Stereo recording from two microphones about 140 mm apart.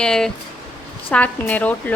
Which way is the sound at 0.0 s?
5° left (ahead or behind).